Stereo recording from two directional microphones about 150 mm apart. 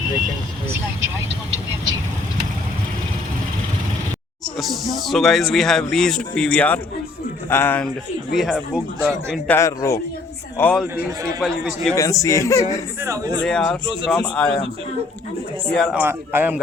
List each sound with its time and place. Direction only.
4.5 s a man's voice: centre (ahead or behind)
8.3 s speech: centre (ahead or behind)
9.5 s speech: 20° left (ahead or behind)
10.6 s a man's voice: 10° left (ahead or behind)
10.9 s a man's voice: 20° right (ahead or behind)
11.4 s speech: 5° left (ahead or behind)
11.9 s speech: 20° left (ahead or behind)
13.0 s a man's voice: 20° right (ahead or behind)
13.4 s speech: 5° left (ahead or behind)
15.7 s speech: centre (ahead or behind)
16.0 s a man's voice: 15° right (ahead or behind)